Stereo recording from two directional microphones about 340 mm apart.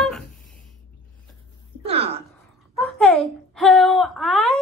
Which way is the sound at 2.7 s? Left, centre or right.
Centre.